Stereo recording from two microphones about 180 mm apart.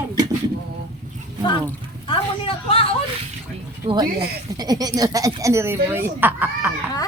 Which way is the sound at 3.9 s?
30° right (ahead or behind).